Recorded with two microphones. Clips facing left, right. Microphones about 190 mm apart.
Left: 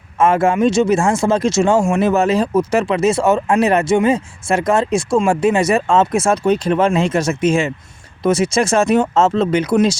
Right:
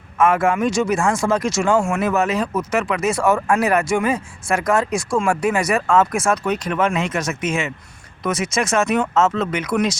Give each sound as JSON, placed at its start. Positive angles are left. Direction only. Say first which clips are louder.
{"t": 0.2, "sound": "speech", "louder": "left 3 dB", "side_deg": 25}